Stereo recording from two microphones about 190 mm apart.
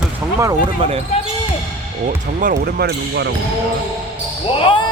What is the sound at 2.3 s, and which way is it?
Speech, 45° right (ahead or behind).